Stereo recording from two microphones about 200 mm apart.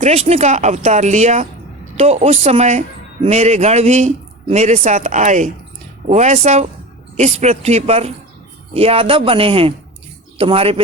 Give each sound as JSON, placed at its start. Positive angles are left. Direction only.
{"t": 0.0, "sound": "a man's voice", "side_deg": -30}